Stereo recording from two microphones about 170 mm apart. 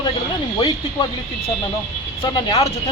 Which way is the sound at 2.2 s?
25° left (ahead or behind).